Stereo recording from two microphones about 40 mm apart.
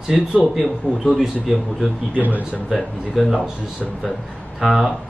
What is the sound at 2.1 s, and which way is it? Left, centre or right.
Speech, right.